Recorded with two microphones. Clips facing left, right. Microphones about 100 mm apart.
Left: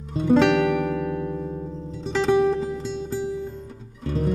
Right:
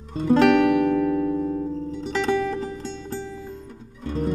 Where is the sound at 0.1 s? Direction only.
Centre (ahead or behind).